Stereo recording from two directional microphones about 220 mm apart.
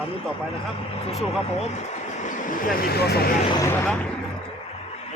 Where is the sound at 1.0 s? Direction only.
30° left (ahead or behind); by 3.3 s 45° left (ahead or behind).